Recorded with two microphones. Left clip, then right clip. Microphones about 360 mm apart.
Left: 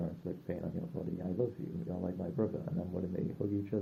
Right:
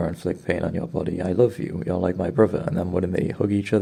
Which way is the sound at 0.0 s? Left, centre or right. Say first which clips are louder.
Right 16 dB; right.